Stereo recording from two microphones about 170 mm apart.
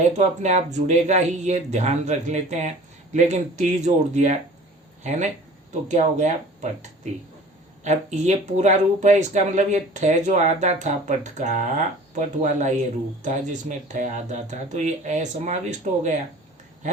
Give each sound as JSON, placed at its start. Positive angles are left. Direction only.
{"t": 0.0, "sound": "speech", "side_deg": -45}
{"t": 5.9, "sound": "speech", "side_deg": -45}